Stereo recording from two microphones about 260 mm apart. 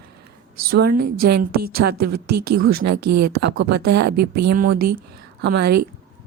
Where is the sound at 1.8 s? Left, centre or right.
Right.